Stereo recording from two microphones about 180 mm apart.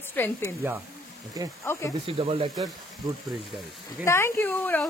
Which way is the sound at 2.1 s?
30° right (ahead or behind).